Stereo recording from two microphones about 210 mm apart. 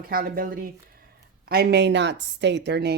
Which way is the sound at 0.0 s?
45° right (ahead or behind).